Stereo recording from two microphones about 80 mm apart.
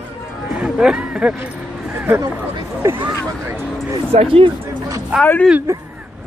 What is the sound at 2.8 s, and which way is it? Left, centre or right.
Speech, right.